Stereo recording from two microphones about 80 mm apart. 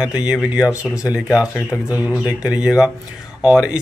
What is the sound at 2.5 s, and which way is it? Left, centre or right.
Speech, centre.